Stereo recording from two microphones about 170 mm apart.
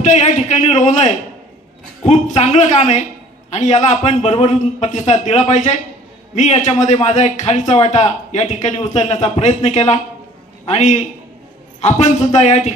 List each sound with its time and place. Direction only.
0.0 s a man's voice: 45° left (ahead or behind)